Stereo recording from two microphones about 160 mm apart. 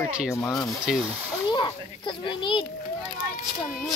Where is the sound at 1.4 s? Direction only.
30° left (ahead or behind).